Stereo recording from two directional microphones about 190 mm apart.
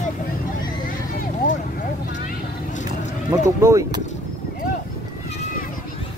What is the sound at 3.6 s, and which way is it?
Speech, 15° right (ahead or behind).